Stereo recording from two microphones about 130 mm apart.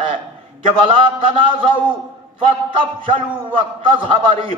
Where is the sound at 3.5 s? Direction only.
40° right (ahead or behind).